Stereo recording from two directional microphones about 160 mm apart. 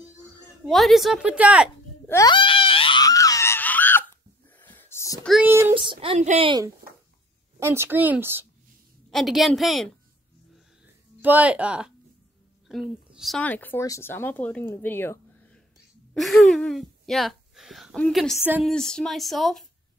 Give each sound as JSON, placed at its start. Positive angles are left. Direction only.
{"t": 0.7, "sound": "speech", "side_deg": 0}
{"t": 2.0, "sound": "speech", "side_deg": 20}
{"t": 2.3, "sound": "screaming", "side_deg": 35}
{"t": 4.6, "sound": "a sound", "side_deg": 10}
{"t": 5.4, "sound": "speech", "side_deg": -15}
{"t": 5.8, "sound": "speech", "side_deg": -35}
{"t": 7.6, "sound": "speech", "side_deg": -15}
{"t": 9.1, "sound": "speech", "side_deg": 0}
{"t": 11.1, "sound": "speech", "side_deg": -10}
{"t": 13.1, "sound": "a sound", "side_deg": 0}
{"t": 13.4, "sound": "speech", "side_deg": 10}
{"t": 14.8, "sound": "a sound", "side_deg": 10}
{"t": 16.2, "sound": "speech", "side_deg": 0}